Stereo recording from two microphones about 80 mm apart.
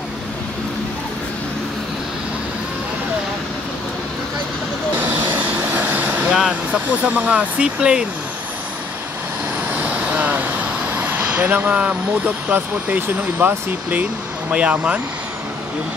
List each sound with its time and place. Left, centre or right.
4.9 s vehicle: right
6.3 s speech: centre
6.9 s speech: centre
9.8 s vehicle: centre
12.4 s speech: right